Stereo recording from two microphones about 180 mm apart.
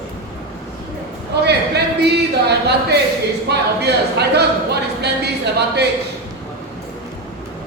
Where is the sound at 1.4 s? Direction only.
65° right (ahead or behind).